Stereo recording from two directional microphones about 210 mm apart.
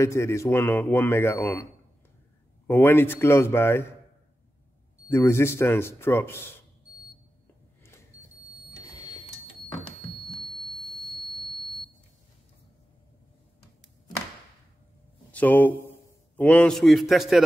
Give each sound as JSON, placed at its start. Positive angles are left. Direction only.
{"t": 0.0, "sound": "a man's voice", "side_deg": 15}
{"t": 5.0, "sound": "a man's voice", "side_deg": 10}
{"t": 8.6, "sound": "a sound", "side_deg": 20}
{"t": 10.4, "sound": "a sound", "side_deg": -20}
{"t": 11.2, "sound": "buzzer", "side_deg": -20}
{"t": 15.3, "sound": "a man's voice", "side_deg": 10}